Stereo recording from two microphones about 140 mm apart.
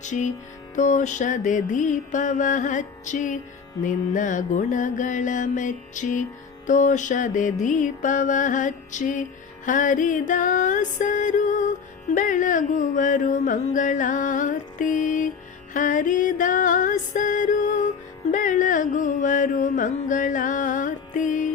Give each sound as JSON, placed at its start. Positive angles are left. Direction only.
{"t": 0.0, "sound": "music", "side_deg": 60}
{"t": 15.7, "sound": "mantra", "side_deg": 70}